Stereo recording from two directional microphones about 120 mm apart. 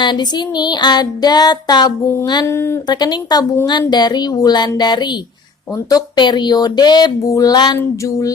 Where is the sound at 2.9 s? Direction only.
35° left (ahead or behind).